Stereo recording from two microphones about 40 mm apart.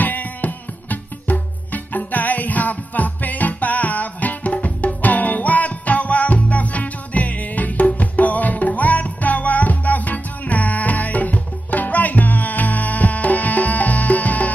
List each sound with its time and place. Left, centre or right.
0.0 s music: left